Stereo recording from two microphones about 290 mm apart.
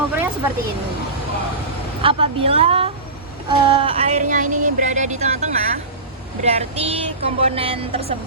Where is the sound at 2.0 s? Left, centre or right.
Centre.